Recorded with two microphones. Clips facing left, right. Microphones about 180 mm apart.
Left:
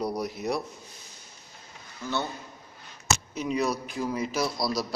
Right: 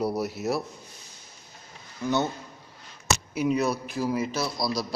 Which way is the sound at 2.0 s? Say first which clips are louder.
Right 5 dB; 15° right (ahead or behind).